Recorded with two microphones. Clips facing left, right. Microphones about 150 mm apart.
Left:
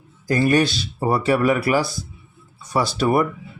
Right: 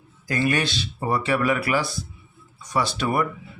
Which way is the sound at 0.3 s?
40° left (ahead or behind).